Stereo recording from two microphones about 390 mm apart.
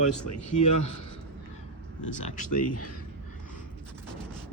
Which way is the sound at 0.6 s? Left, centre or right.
Left.